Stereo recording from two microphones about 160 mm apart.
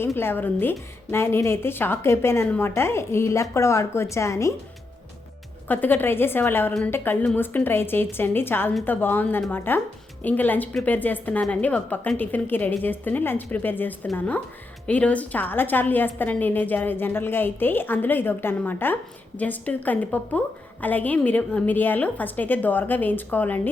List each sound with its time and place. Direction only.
0.0 s a woman's voice: 15° left (ahead or behind)
5.6 s a woman's voice: 10° left (ahead or behind)